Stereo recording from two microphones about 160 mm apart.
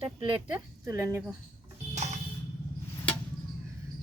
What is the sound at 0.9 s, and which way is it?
Speech, 15° right (ahead or behind).